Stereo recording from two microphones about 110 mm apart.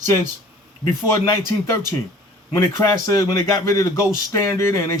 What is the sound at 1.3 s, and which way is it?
A man's voice, 25° left (ahead or behind).